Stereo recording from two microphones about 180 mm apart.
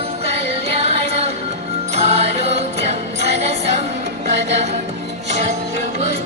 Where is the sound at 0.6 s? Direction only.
35° right (ahead or behind).